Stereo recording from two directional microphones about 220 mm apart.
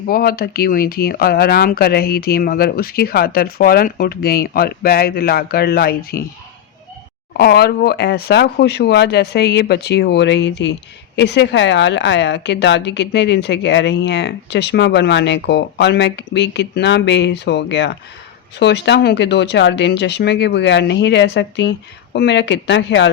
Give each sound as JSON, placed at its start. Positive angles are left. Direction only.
{"t": 0.1, "sound": "a woman's voice", "side_deg": 45}
{"t": 7.3, "sound": "a woman's voice", "side_deg": 45}